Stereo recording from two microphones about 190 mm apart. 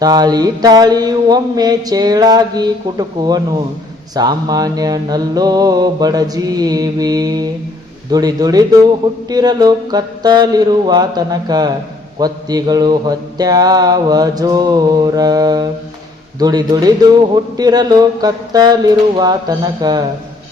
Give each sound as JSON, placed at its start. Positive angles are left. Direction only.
{"t": 0.0, "sound": "speech", "side_deg": -20}